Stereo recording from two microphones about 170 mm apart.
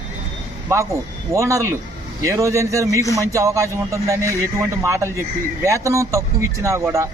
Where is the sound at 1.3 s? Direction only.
20° right (ahead or behind).